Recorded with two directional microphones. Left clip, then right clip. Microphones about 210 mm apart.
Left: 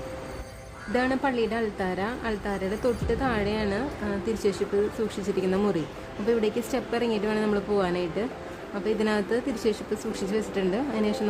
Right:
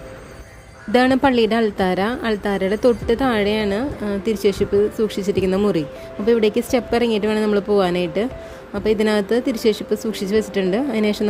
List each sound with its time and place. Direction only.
0.9 s a woman's voice: 40° right (ahead or behind)